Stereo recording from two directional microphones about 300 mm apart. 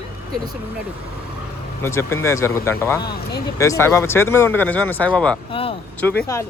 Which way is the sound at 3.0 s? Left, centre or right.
Left.